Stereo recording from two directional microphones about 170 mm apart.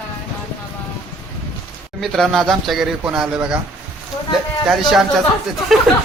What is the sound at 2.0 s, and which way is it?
Speech, centre (ahead or behind).